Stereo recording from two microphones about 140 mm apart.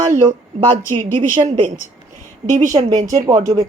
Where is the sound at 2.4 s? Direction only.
65° right (ahead or behind).